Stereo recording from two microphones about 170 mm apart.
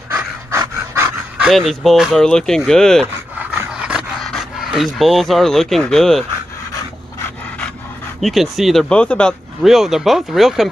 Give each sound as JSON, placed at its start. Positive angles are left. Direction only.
{"t": 0.1, "sound": "pant", "side_deg": -15}
{"t": 1.4, "sound": "speech", "side_deg": 0}
{"t": 3.3, "sound": "dog", "side_deg": -10}
{"t": 8.2, "sound": "speech", "side_deg": 0}